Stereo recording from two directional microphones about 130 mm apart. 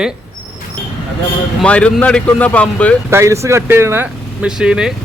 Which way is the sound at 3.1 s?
20° right (ahead or behind).